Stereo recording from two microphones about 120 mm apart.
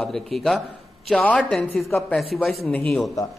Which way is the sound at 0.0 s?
5° left (ahead or behind).